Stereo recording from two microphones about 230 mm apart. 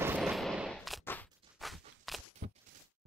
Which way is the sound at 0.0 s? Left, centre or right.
Centre.